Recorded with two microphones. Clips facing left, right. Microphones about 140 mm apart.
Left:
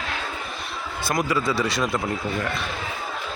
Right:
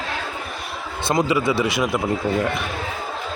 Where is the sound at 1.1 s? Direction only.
30° right (ahead or behind).